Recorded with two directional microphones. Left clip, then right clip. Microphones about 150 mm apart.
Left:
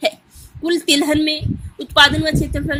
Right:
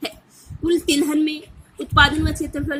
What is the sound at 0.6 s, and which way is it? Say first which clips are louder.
A woman's voice: left 3 dB; 45° left (ahead or behind).